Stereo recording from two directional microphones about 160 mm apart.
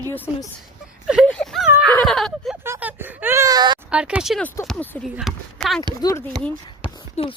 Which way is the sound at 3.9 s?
5° right (ahead or behind).